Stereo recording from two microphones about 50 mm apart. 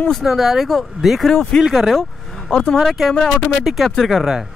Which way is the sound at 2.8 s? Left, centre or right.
Centre.